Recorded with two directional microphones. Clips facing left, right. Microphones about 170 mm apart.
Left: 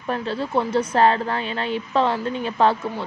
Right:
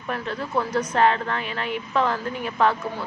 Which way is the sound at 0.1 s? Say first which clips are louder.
Left 3 dB; 30° left (ahead or behind).